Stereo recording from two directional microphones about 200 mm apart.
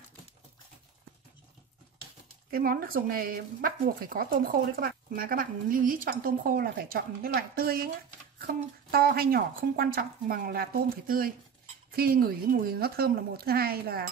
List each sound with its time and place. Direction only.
2.5 s speech: 45° right (ahead or behind)
8.9 s speech: 50° right (ahead or behind)